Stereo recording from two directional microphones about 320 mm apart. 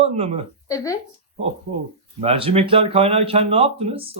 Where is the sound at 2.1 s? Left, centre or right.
Centre.